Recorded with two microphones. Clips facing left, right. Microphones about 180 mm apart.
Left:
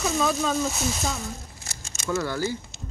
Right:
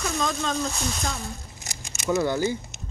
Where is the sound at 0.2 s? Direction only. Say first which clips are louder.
Left 2 dB; 5° left (ahead or behind).